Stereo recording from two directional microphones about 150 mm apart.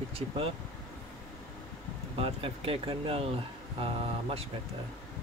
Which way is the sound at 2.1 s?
40° right (ahead or behind).